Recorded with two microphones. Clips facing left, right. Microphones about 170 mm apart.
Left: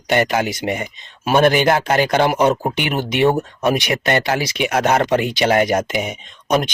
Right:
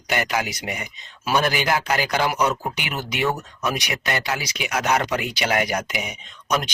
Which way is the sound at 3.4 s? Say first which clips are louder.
Left 9 dB; 55° left (ahead or behind).